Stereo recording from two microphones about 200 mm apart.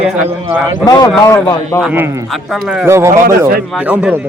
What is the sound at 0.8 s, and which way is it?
Speech, 20° left (ahead or behind).